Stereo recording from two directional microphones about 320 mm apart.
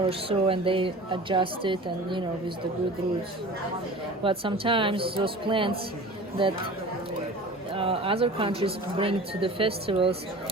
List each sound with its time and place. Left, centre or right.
0.0 s speech: centre
4.2 s speech: centre
7.7 s speech: centre